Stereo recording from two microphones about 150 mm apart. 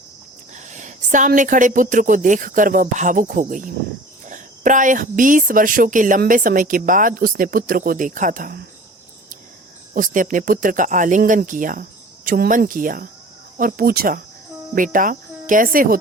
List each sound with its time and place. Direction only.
0.5 s a woman's voice: 55° right (ahead or behind)
9.9 s a woman's voice: 60° right (ahead or behind); by 14.2 s 85° right
14.8 s cricket: 65° right (ahead or behind)